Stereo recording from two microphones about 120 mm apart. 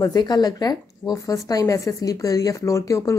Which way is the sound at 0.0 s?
35° left (ahead or behind).